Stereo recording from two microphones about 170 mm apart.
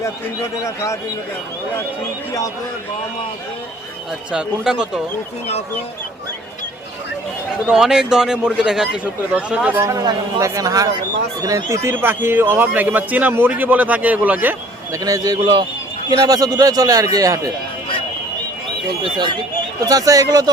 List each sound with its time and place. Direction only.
4.3 s speech: 5° right (ahead or behind)
7.7 s a man's voice: 5° right (ahead or behind)
15.0 s speech: 20° right (ahead or behind)
19.8 s speech: 20° right (ahead or behind)